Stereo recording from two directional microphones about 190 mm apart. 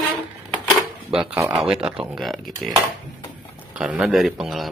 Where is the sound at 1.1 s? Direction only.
5° right (ahead or behind).